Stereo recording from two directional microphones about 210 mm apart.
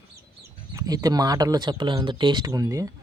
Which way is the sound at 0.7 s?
15° right (ahead or behind).